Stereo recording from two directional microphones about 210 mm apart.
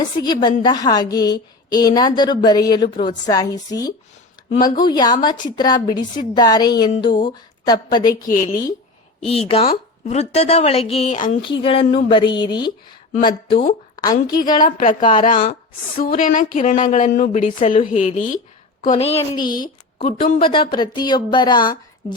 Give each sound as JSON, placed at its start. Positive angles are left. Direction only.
{"t": 0.4, "sound": "a woman's voice", "side_deg": 20}
{"t": 8.3, "sound": "a woman's voice", "side_deg": 35}
{"t": 14.6, "sound": "a woman's voice", "side_deg": 40}